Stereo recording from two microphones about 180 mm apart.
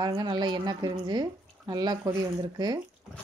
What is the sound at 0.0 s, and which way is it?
Speech, 25° right (ahead or behind).